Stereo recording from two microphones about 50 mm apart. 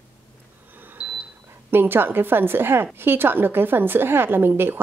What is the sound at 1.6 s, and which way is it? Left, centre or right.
A woman's voice, right.